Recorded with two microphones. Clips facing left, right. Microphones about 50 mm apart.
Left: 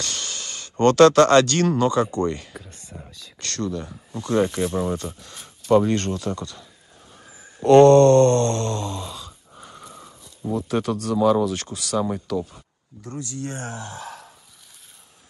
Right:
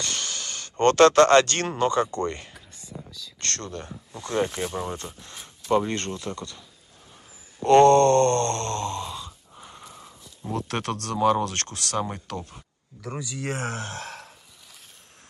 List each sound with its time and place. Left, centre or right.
0.0 s a sound: right
1.7 s speech: right
2.5 s speech: left
3.3 s speech: right
4.4 s speech: centre
4.9 s speech: right
7.6 s speech: right
9.6 s wheeze: centre
10.5 s speech: right
13.5 s speech: right